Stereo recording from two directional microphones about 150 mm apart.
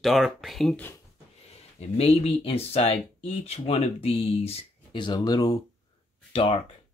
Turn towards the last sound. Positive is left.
turn(degrees=35)  # may be behind; listen again after turning